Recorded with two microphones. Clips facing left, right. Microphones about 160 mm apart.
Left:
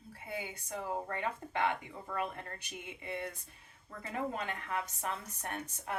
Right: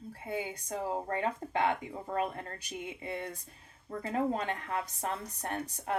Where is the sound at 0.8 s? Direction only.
30° right (ahead or behind).